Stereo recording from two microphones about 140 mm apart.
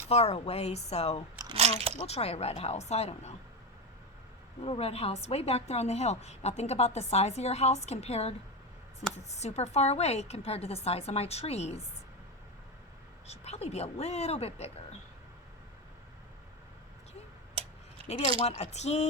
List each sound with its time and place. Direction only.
0.1 s a woman's voice: 50° left (ahead or behind)
1.5 s speech: 50° right (ahead or behind)
2.0 s a woman's voice: 45° left (ahead or behind)
4.6 s a woman's voice: 45° left (ahead or behind)
13.2 s a woman's voice: 50° left (ahead or behind)
18.1 s a woman's voice: 50° left (ahead or behind)